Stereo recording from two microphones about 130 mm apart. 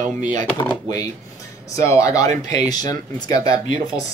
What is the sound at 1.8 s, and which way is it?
Speech, 25° left (ahead or behind).